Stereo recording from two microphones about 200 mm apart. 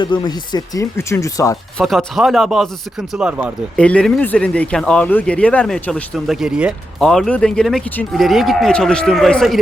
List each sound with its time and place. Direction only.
0.0 s speech: 20° left (ahead or behind)
1.8 s speech: centre (ahead or behind)
3.8 s speech: 5° left (ahead or behind)